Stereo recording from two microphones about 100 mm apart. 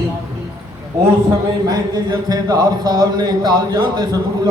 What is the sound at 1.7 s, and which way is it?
Speech, 40° right (ahead or behind).